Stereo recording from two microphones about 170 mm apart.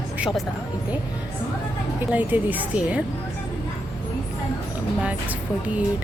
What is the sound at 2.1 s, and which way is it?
Speech, 10° right (ahead or behind).